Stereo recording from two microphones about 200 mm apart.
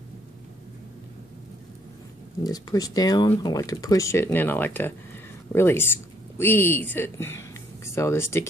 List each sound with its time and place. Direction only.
2.4 s speech: 20° left (ahead or behind)